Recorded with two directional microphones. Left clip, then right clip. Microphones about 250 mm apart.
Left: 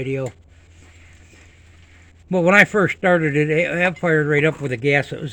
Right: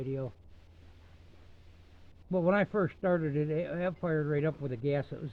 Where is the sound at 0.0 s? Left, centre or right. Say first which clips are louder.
Left 13 dB; centre.